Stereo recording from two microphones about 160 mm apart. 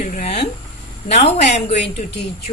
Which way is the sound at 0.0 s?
50° left (ahead or behind).